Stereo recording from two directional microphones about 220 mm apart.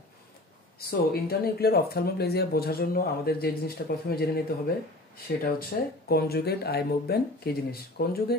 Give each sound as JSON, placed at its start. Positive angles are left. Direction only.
{"t": 0.7, "sound": "speech", "side_deg": 45}